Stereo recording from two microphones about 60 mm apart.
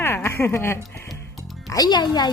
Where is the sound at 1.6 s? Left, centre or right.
Left.